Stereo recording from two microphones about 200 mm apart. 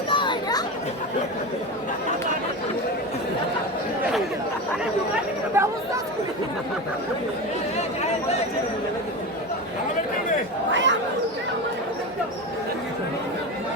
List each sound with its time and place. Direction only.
0.1 s chatter: 25° left (ahead or behind)
5.6 s chatter: 10° right (ahead or behind)
10.7 s chatter: 65° right (ahead or behind)